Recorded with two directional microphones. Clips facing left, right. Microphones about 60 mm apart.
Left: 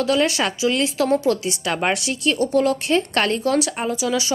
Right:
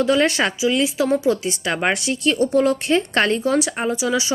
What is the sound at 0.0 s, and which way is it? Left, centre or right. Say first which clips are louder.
Speech: right 2 dB; right.